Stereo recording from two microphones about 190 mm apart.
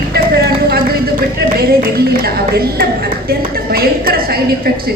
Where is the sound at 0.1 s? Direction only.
55° right (ahead or behind).